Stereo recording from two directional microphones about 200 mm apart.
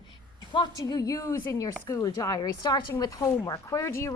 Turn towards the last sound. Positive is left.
turn(degrees=15)  # may be behind; listen again after turning